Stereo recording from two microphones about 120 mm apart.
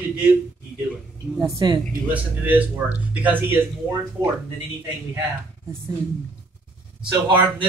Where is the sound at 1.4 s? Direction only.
35° right (ahead or behind).